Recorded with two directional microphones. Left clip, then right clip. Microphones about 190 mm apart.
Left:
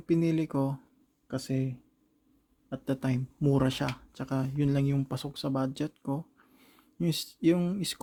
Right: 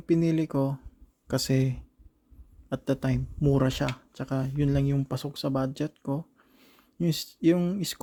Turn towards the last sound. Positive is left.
turn(degrees=-10)  # may be behind; listen again after turning